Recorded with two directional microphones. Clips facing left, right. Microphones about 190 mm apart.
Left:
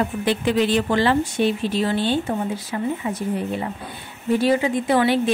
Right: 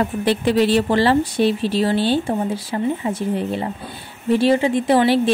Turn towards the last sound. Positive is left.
turn(degrees=-30)  # may be behind; listen again after turning